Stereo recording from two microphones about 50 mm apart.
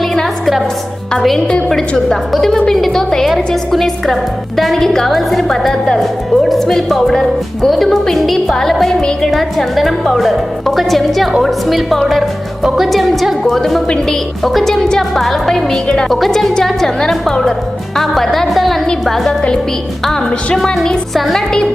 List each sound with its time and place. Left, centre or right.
0.0 s music: centre
2.0 s a woman's voice: centre
6.0 s a woman's voice: centre
9.0 s speech: centre
9.3 s a woman's voice: centre
13.8 s speech: centre
14.4 s a woman's voice: centre
21.1 s a woman's voice: centre